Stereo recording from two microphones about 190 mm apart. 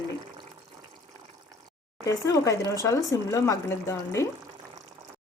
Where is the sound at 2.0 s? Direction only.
15° left (ahead or behind).